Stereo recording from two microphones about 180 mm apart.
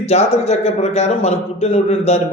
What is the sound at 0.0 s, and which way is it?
A man's voice, 35° left (ahead or behind).